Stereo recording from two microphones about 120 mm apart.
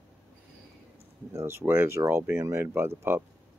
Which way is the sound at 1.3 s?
20° right (ahead or behind).